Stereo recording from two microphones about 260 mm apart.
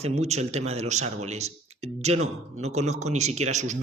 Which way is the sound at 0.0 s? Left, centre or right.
Right.